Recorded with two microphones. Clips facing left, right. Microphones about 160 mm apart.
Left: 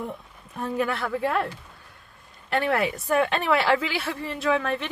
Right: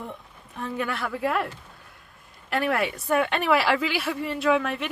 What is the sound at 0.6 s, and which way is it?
Speech, 35° left (ahead or behind).